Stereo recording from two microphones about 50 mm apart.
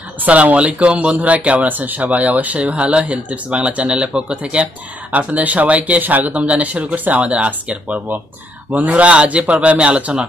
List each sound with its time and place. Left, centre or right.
0.2 s speech: right
1.7 s speech: right